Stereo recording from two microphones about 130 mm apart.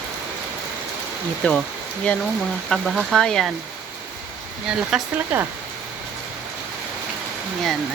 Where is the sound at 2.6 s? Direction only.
Centre (ahead or behind).